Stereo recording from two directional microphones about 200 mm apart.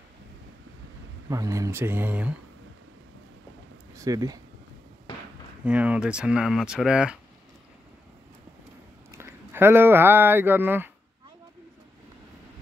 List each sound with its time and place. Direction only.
1.3 s speech: 15° right (ahead or behind)
3.9 s speech: 15° right (ahead or behind)
5.1 s a sound: 25° left (ahead or behind)
5.7 s speech: 5° right (ahead or behind)
9.1 s speech: 10° right (ahead or behind)